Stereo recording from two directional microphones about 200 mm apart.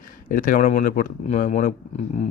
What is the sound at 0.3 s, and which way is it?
Speech, 45° left (ahead or behind).